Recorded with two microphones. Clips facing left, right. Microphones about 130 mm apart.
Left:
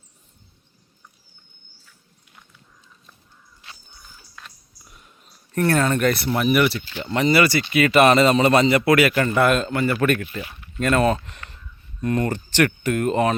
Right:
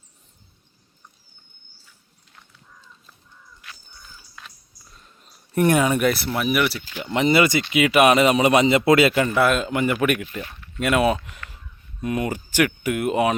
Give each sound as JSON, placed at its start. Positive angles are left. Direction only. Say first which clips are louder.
{"t": 3.6, "sound": "a sound", "louder": "even", "side_deg": 25}
{"t": 4.4, "sound": "a sound", "louder": "even", "side_deg": 0}
{"t": 4.9, "sound": "wheeze", "louder": "left 1 dB", "side_deg": 15}
{"t": 5.5, "sound": "speech", "louder": "right 1 dB", "side_deg": -15}
{"t": 9.1, "sound": "a man's voice", "louder": "left 1 dB", "side_deg": -5}
{"t": 9.6, "sound": "speech", "louder": "left 1 dB", "side_deg": -15}